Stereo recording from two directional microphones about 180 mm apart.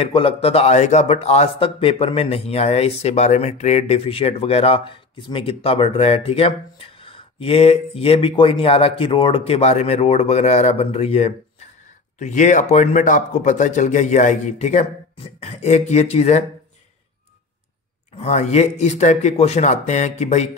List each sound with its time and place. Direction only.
0.0 s a man's voice: 30° left (ahead or behind)
18.1 s a man's voice: 35° left (ahead or behind)